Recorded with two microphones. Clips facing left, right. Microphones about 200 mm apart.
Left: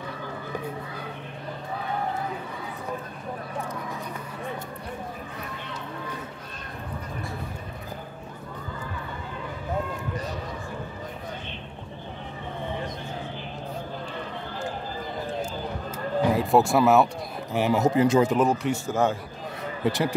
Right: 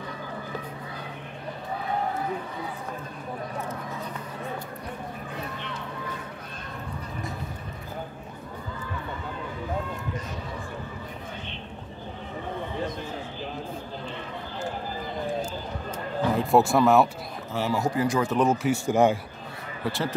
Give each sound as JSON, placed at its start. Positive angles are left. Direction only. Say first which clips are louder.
{"t": 16.2, "sound": "speech", "louder": "left 1 dB", "side_deg": 5}
{"t": 17.5, "sound": "speech", "louder": "left 4 dB", "side_deg": 15}
{"t": 18.3, "sound": "speech", "louder": "even", "side_deg": 0}
{"t": 18.9, "sound": "a man's voice", "louder": "right 4 dB", "side_deg": -15}
{"t": 19.8, "sound": "speech", "louder": "left 4 dB", "side_deg": 15}